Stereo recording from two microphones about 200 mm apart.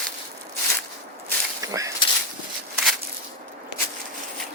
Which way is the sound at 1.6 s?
15° right (ahead or behind).